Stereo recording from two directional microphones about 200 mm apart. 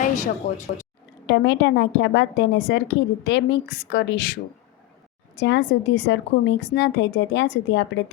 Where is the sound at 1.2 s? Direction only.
60° left (ahead or behind).